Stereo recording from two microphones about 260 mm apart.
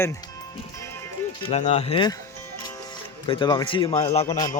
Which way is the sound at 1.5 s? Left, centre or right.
Left.